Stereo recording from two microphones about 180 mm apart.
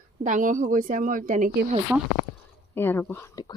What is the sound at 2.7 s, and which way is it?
Speech, 10° left (ahead or behind).